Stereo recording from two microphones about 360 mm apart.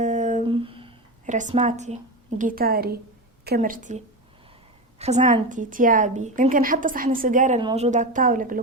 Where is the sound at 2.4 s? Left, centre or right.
Right.